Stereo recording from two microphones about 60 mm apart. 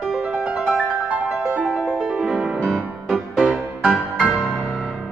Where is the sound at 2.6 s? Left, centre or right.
Centre.